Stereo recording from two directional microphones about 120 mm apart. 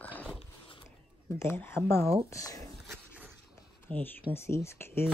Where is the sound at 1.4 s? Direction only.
20° left (ahead or behind).